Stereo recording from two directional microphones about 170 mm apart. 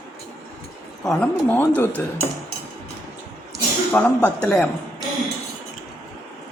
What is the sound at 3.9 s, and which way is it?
Speech, 10° left (ahead or behind).